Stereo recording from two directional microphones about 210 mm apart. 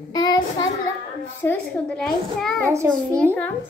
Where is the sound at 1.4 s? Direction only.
5° left (ahead or behind).